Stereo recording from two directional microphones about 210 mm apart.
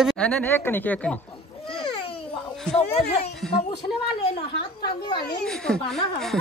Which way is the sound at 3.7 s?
50° left (ahead or behind).